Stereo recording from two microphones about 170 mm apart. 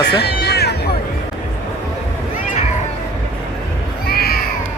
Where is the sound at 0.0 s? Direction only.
75° left (ahead or behind).